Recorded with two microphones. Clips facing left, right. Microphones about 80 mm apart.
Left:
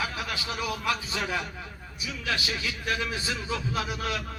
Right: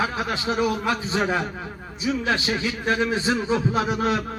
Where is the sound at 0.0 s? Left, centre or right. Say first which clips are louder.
Right 7 dB; right.